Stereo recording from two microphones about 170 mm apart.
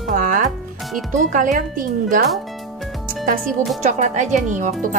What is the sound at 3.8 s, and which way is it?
Speech, 45° right (ahead or behind).